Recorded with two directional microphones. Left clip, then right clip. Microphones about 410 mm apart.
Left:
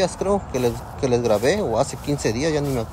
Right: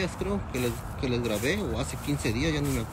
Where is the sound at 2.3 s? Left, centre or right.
Centre.